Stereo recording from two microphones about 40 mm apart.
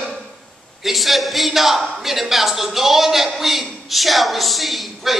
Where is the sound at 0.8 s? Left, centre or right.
Centre.